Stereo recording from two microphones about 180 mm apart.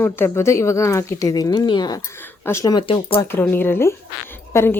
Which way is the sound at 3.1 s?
10° left (ahead or behind).